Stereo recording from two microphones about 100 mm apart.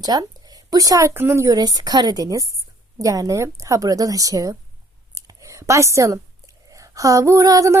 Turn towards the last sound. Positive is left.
turn(degrees=-35)  # may be behind; listen again after turning